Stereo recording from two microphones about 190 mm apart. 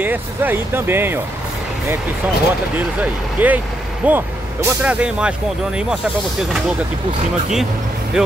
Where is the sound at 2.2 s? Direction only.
10° right (ahead or behind).